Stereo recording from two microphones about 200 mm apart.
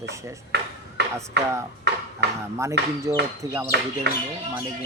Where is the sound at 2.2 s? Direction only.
55° right (ahead or behind).